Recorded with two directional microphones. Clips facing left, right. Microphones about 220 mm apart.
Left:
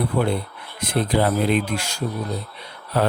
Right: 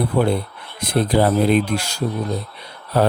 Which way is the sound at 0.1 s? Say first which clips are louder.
Right 3 dB; 40° right (ahead or behind).